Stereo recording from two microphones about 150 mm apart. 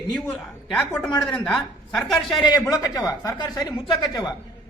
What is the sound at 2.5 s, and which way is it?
Speech, 25° left (ahead or behind).